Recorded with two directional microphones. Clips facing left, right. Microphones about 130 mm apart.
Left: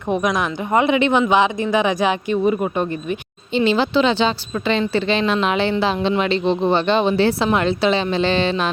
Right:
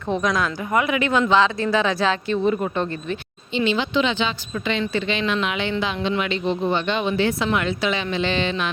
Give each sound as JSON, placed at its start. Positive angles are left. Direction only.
{"t": 0.1, "sound": "speech", "side_deg": 15}
{"t": 3.5, "sound": "speech", "side_deg": 40}